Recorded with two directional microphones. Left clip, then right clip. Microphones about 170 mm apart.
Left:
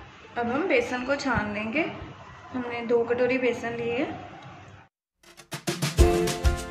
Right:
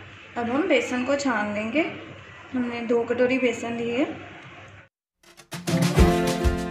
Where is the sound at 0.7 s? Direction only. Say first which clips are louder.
Right 2 dB; 35° right (ahead or behind).